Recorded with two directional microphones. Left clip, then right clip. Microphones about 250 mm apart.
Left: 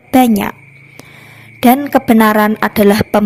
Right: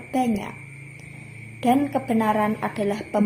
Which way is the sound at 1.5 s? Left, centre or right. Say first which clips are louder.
Left 11 dB; left.